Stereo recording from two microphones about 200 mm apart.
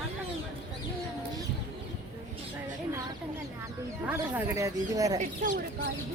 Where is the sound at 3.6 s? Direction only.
10° right (ahead or behind).